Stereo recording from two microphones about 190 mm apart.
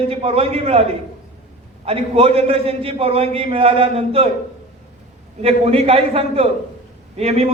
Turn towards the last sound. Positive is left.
turn(degrees=-35)  # may be behind; listen again after turning